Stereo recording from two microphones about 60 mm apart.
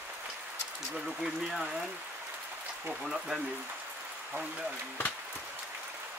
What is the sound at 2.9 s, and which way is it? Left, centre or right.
Speech, centre.